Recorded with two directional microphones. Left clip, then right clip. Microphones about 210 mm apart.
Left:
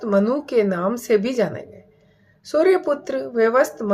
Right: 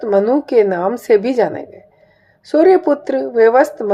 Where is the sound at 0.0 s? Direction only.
5° right (ahead or behind).